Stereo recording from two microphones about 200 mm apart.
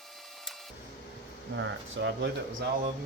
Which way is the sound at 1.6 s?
60° right (ahead or behind).